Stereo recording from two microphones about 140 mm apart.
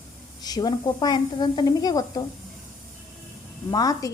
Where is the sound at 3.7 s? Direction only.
25° left (ahead or behind).